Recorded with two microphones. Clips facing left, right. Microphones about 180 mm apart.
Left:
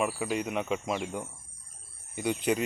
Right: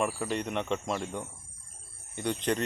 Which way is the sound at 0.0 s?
5° left (ahead or behind).